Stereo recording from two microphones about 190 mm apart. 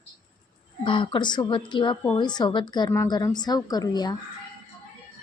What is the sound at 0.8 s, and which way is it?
Speech, 25° left (ahead or behind).